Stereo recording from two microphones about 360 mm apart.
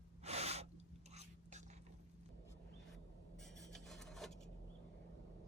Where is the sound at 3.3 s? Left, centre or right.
Centre.